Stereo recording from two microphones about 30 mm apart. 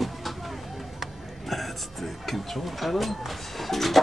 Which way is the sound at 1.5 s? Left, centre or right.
Centre.